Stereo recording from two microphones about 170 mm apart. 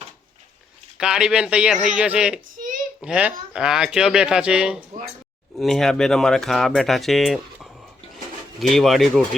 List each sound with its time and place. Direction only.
0.9 s speech: 5° right (ahead or behind)
2.6 s a sound: 50° right (ahead or behind)
3.0 s speech: 5° right (ahead or behind)